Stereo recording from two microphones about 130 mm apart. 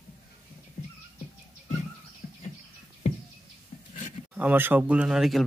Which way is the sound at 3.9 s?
70° left (ahead or behind).